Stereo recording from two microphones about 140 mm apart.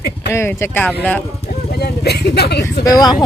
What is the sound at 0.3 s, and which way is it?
Speech, 15° left (ahead or behind).